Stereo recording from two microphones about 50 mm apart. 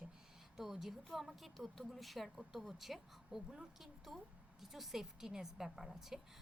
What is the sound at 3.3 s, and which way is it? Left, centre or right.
A woman's voice, centre.